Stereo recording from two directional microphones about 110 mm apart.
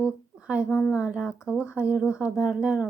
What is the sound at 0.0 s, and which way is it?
A woman's voice, 10° right (ahead or behind).